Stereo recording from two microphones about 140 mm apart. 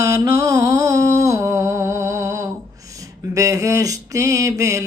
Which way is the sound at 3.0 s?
25° right (ahead or behind).